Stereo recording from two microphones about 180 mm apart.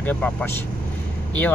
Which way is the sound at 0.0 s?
10° left (ahead or behind).